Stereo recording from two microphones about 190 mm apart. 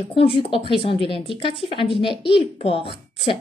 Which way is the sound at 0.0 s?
30° left (ahead or behind).